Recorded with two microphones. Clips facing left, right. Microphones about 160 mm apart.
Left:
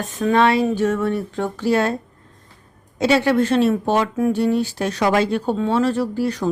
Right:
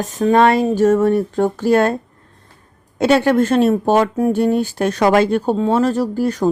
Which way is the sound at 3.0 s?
50° right (ahead or behind).